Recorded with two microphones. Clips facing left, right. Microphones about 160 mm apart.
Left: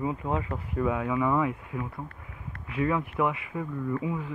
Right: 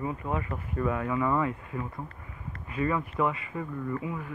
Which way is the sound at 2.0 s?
60° left (ahead or behind).